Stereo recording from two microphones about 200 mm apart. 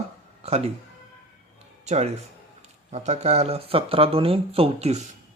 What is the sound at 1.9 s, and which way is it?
Speech, 35° right (ahead or behind).